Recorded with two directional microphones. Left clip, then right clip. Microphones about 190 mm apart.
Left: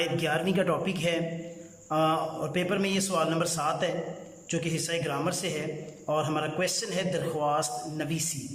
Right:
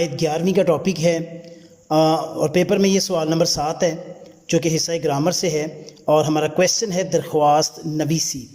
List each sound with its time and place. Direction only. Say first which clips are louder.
0.0 s a man's voice: right 7 dB; 25° right (ahead or behind)